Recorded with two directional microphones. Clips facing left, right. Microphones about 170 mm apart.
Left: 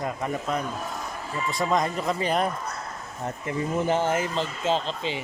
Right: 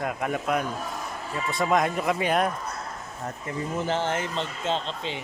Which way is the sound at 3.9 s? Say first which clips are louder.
Left 3 dB; 10° left (ahead or behind).